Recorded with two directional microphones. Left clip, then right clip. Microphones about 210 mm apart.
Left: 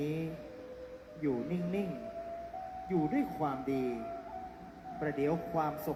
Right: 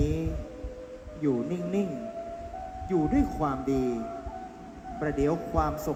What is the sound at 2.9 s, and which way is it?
A man's voice, 35° right (ahead or behind).